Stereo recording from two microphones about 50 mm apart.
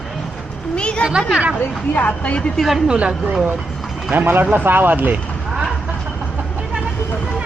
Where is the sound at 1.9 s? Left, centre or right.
Left.